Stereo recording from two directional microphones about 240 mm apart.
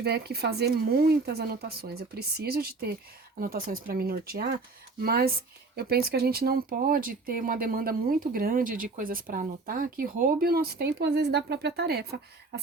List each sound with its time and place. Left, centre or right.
0.0 s speech: right